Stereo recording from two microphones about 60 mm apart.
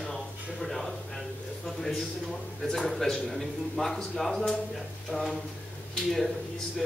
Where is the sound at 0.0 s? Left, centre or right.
Centre.